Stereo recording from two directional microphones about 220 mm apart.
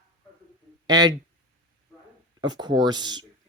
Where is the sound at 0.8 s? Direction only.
20° right (ahead or behind).